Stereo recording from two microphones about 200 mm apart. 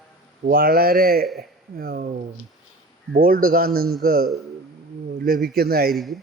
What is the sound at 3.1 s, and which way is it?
A man's voice, 45° right (ahead or behind).